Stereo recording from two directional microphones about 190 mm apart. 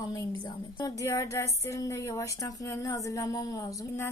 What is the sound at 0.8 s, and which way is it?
A woman's voice, 15° left (ahead or behind).